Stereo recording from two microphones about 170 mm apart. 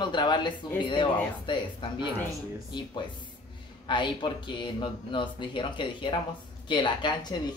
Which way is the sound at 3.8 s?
30° left (ahead or behind).